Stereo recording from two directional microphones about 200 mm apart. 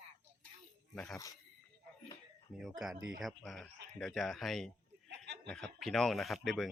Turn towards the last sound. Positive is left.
turn(degrees=0)  # may be behind; listen again after turning